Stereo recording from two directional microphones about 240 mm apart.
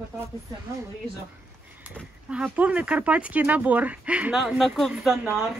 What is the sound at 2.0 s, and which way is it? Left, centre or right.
Speech, centre.